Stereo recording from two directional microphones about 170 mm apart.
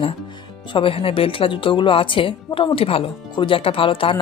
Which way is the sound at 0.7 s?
30° left (ahead or behind).